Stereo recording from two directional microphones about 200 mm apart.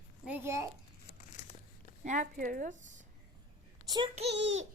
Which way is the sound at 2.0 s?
40° right (ahead or behind).